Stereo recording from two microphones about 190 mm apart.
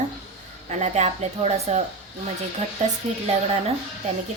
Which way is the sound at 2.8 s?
40° right (ahead or behind).